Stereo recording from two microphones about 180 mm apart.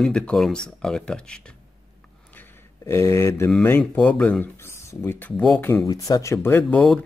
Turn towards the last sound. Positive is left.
turn(degrees=5)  # may be behind; listen again after turning